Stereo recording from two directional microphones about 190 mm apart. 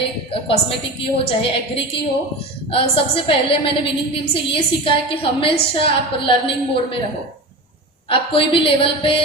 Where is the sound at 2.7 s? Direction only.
30° left (ahead or behind).